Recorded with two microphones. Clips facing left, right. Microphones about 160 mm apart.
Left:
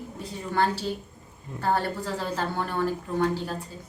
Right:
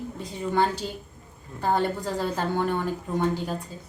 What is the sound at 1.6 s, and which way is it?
A woman's voice, 15° right (ahead or behind).